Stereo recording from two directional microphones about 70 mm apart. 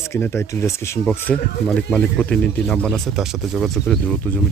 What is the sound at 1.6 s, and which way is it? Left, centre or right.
Speech, centre.